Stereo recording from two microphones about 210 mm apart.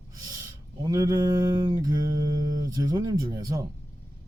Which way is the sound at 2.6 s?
15° right (ahead or behind).